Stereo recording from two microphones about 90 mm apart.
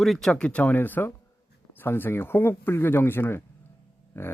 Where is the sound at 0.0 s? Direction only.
Centre (ahead or behind).